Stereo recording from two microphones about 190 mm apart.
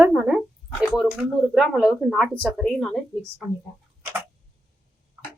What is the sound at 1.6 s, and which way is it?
A woman's voice, 5° right (ahead or behind).